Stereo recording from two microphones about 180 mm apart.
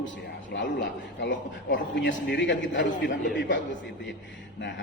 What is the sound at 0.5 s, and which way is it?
A man's voice, 80° left.